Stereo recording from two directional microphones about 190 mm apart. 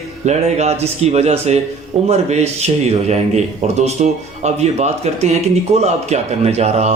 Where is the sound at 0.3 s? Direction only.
35° right (ahead or behind).